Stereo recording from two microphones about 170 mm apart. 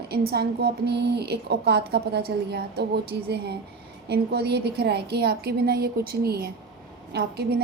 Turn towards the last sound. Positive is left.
turn(degrees=-70)  # may be behind; listen again after turning